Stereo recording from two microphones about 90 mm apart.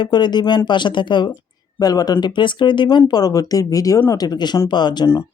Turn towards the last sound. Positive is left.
turn(degrees=55)  # may be behind; listen again after turning